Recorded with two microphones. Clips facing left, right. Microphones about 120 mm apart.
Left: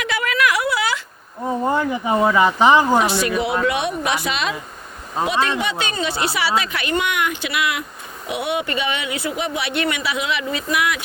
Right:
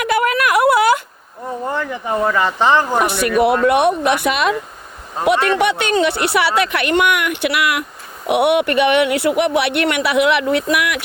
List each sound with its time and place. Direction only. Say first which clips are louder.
0.0 s a sound: right 4 dB; 50° right (ahead or behind)
1.6 s speech: left 2 dB; 15° left (ahead or behind)
3.0 s speech: right 4 dB; 60° right (ahead or behind)